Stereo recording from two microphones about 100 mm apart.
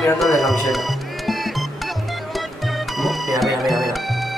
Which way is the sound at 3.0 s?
Centre (ahead or behind).